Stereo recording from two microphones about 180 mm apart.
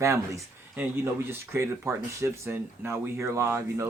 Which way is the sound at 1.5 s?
15° right (ahead or behind).